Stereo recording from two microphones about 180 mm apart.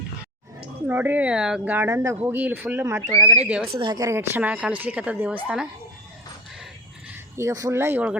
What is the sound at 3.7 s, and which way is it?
A child's voice, 25° right (ahead or behind).